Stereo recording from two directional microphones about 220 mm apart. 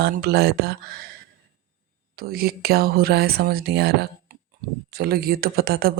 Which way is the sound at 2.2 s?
45° right (ahead or behind).